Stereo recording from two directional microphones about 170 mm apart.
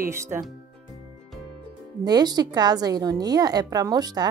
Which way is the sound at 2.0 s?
25° right (ahead or behind).